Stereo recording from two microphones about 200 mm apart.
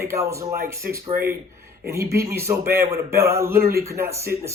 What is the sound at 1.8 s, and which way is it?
Speech, 15° right (ahead or behind).